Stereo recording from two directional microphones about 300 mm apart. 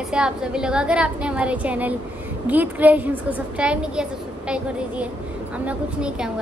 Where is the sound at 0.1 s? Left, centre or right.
Centre.